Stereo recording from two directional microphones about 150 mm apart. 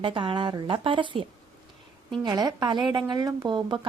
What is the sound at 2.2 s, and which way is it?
A woman's voice, 30° right (ahead or behind).